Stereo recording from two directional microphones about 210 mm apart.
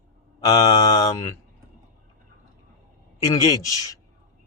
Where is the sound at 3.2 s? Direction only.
15° left (ahead or behind).